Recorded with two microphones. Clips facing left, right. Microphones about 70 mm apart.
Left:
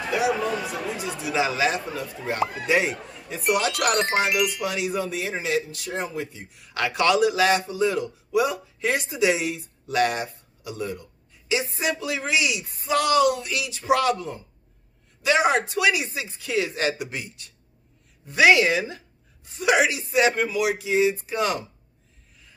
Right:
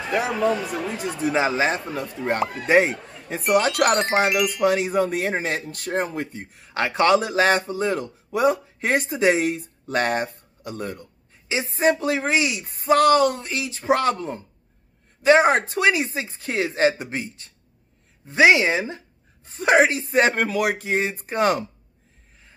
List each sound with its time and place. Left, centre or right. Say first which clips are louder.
0.3 s music: right 3 dB; centre
0.9 s a man's voice: right 4 dB; right
3.7 s music: right 3 dB; centre
4.6 s speech: right 6 dB; right
6.6 s a man's voice: right 3 dB; right